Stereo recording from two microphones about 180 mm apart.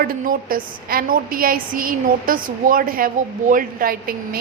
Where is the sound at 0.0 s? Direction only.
55° right (ahead or behind).